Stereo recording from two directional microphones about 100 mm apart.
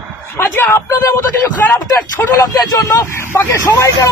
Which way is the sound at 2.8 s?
30° left (ahead or behind).